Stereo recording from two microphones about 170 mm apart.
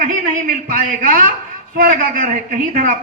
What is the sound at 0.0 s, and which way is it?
A man's voice, 55° right (ahead or behind).